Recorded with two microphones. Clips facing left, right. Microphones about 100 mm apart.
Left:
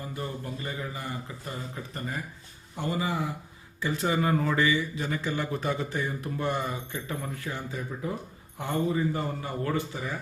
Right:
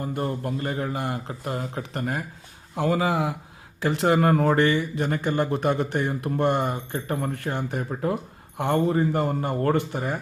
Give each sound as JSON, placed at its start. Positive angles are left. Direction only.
{"t": 0.0, "sound": "a man's voice", "side_deg": -60}
{"t": 2.7, "sound": "speech", "side_deg": -90}